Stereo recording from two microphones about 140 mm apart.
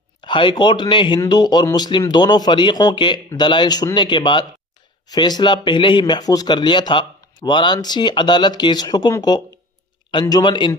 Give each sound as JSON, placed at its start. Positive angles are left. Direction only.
{"t": 0.2, "sound": "speech", "side_deg": 35}